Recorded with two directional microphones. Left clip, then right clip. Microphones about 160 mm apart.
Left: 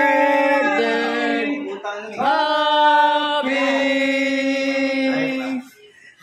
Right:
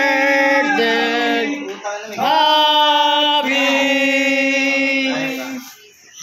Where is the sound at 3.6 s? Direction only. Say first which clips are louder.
Right 3 dB; 5° right (ahead or behind).